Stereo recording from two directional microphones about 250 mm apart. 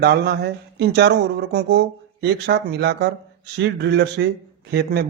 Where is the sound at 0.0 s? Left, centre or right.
Right.